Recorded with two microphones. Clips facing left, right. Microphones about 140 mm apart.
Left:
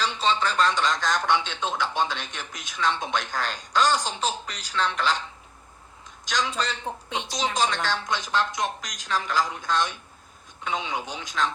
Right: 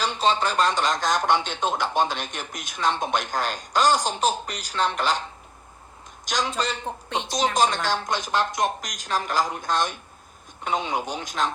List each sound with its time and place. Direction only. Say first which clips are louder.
0.0 s speech: right 2 dB; 45° right (ahead or behind)
6.2 s speech: right 1 dB; 40° right (ahead or behind)